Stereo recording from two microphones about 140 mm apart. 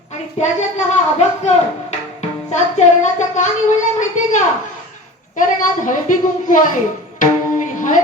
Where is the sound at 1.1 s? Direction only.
50° left (ahead or behind).